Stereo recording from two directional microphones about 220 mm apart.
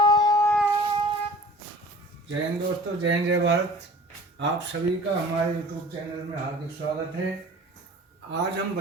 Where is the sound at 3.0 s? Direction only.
55° right (ahead or behind).